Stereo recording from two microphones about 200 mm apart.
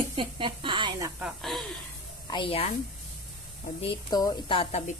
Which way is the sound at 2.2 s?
25° left (ahead or behind).